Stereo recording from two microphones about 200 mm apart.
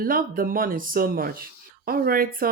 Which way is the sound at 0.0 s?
45° right (ahead or behind).